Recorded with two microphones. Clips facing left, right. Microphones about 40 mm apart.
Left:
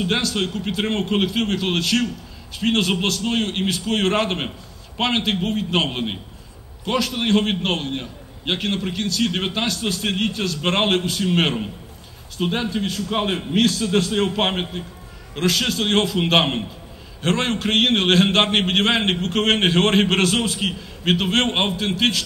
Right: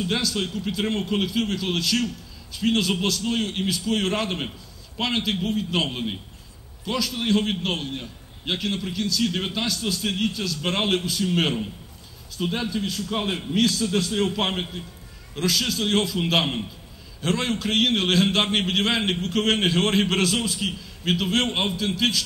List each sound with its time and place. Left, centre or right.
0.0 s a man's voice: left